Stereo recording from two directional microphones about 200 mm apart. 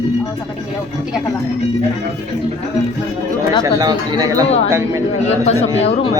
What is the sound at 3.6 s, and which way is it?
Speech, 20° right (ahead or behind).